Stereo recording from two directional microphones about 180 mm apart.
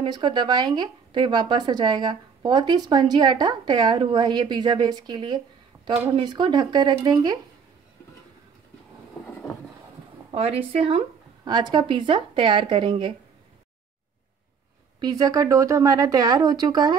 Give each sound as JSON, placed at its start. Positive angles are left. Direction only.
{"t": 0.0, "sound": "speech", "side_deg": -25}
{"t": 10.3, "sound": "speech", "side_deg": -35}
{"t": 15.0, "sound": "speech", "side_deg": -20}